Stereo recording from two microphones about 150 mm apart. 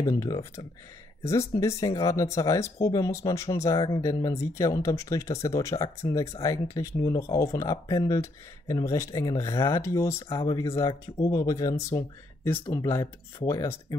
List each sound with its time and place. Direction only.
0.1 s speech: 20° left (ahead or behind)
1.5 s speech: 20° left (ahead or behind)